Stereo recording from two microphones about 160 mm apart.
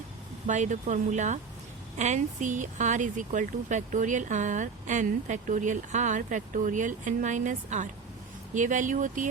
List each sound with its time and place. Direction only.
0.4 s speech: 50° right (ahead or behind)